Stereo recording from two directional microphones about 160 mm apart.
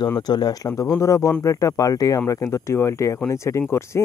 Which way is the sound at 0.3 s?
25° left (ahead or behind).